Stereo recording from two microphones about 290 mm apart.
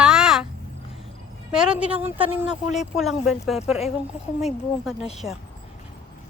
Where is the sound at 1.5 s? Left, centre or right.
Centre.